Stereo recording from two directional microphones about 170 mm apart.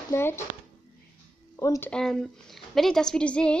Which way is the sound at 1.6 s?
20° left (ahead or behind).